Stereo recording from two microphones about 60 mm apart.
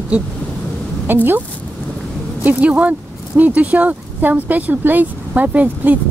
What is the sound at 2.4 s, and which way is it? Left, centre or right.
Speech, right.